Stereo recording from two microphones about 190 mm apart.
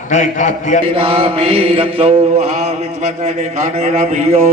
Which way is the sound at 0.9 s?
30° right (ahead or behind).